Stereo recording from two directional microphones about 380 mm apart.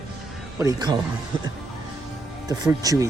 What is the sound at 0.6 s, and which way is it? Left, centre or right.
Speech, centre.